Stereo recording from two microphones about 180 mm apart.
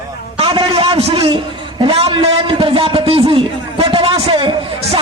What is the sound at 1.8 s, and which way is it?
A man's voice, 30° right (ahead or behind).